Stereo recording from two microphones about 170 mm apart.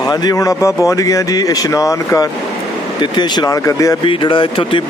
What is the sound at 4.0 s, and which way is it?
Speech, 30° left (ahead or behind).